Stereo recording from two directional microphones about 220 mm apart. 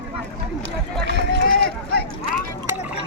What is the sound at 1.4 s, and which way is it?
Run, 45° left (ahead or behind).